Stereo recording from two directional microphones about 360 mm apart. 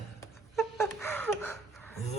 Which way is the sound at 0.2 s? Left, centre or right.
Centre.